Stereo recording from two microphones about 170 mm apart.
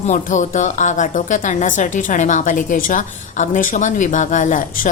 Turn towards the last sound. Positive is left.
turn(degrees=50)  # may be behind; listen again after turning